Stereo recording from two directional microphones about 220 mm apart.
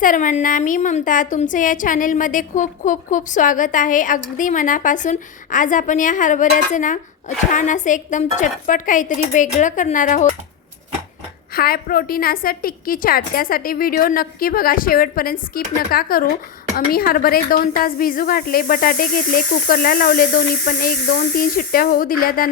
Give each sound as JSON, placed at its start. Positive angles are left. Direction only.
{"t": 0.0, "sound": "speech", "side_deg": 35}
{"t": 11.5, "sound": "speech", "side_deg": 45}